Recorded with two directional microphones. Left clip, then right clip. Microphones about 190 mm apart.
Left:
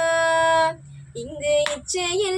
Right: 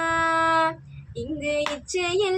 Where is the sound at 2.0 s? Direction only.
15° right (ahead or behind).